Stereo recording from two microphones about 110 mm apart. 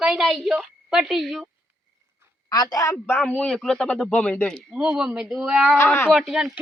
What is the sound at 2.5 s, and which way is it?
Speech, 35° left (ahead or behind).